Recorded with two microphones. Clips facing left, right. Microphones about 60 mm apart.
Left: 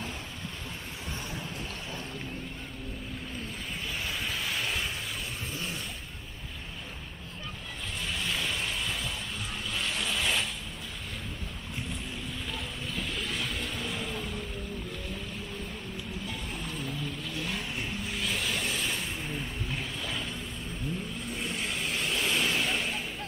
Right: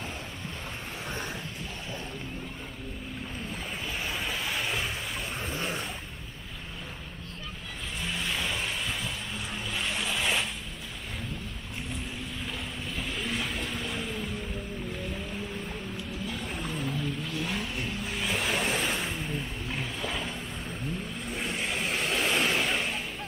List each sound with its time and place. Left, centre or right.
4.1 s vehicle: centre
5.5 s a sound: right
8.0 s vehicle: centre
9.7 s boat: centre
13.1 s vehicle: centre
16.3 s vehicle: centre
18.5 s a sound: right
19.1 s vehicle: centre
21.5 s vehicle: centre
21.7 s vehicle: right
22.7 s a sound: centre